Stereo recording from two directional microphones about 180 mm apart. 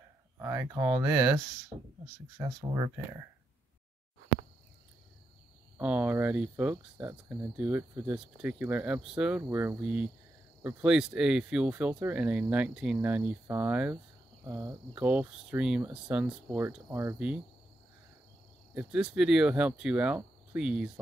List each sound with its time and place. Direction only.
0.4 s speech: 15° right (ahead or behind)
2.3 s speech: 20° right (ahead or behind)
5.8 s speech: 10° right (ahead or behind)
18.8 s speech: 5° right (ahead or behind)